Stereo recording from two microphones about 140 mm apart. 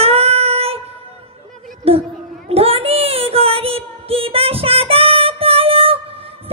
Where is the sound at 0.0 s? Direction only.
45° right (ahead or behind).